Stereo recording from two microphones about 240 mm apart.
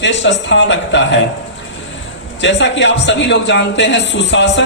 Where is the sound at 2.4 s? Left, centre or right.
Left.